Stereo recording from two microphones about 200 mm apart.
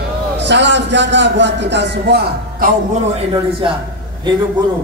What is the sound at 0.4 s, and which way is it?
A man's voice, 60° right (ahead or behind).